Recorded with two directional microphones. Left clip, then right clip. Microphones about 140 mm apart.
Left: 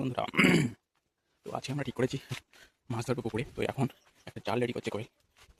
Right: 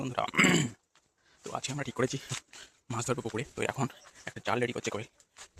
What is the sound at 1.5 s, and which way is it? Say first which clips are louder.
Speech: right 1 dB; 55° left (ahead or behind).